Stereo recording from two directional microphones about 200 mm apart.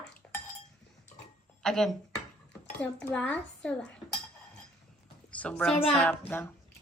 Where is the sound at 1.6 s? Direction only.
Centre (ahead or behind).